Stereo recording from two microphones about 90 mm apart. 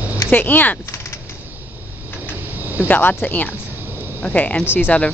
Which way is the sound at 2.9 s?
20° left (ahead or behind).